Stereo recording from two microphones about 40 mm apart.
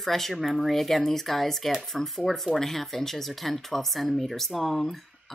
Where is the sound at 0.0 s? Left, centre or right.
Centre.